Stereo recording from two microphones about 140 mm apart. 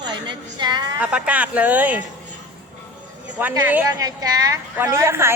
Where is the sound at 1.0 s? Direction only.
10° right (ahead or behind).